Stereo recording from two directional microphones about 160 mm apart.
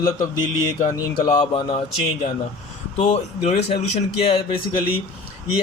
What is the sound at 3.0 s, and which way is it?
Speech, 40° left (ahead or behind).